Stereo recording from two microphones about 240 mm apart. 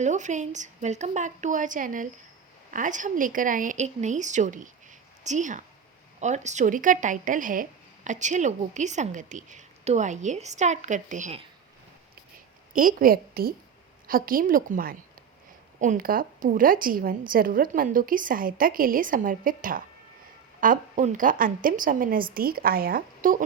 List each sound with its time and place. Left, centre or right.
0.0 s a woman's voice: right
12.7 s a woman's voice: right